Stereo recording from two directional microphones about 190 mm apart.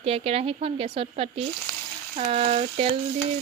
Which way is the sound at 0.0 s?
30° right (ahead or behind).